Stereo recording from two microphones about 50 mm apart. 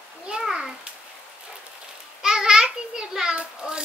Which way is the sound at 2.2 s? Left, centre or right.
Centre.